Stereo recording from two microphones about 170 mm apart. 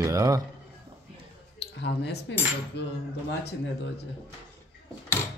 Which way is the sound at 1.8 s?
85° left.